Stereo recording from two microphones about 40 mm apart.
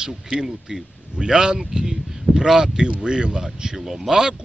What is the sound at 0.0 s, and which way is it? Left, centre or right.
Speech, centre.